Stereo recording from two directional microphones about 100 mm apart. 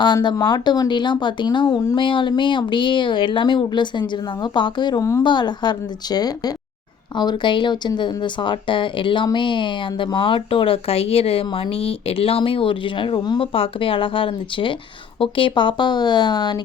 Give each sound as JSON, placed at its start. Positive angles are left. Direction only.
{"t": 0.0, "sound": "speech", "side_deg": 50}
{"t": 13.5, "sound": "speech", "side_deg": 65}